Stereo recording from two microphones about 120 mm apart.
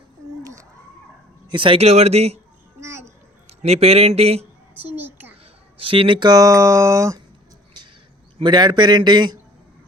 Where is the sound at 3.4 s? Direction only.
60° right (ahead or behind).